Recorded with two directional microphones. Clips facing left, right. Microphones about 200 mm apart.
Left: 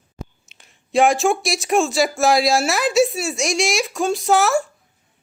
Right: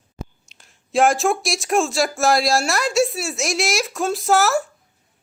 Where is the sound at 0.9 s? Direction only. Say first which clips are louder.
Left 1 dB; centre (ahead or behind).